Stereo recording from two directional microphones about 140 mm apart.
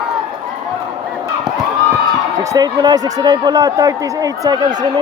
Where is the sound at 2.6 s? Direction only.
30° right (ahead or behind).